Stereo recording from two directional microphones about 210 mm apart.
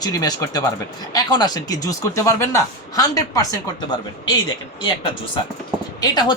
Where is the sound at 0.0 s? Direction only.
20° left (ahead or behind).